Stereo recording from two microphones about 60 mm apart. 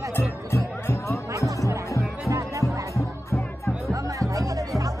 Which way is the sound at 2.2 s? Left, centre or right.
Right.